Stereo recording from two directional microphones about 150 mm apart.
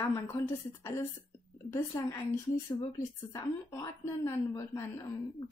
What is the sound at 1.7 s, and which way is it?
A woman's voice, 20° left (ahead or behind).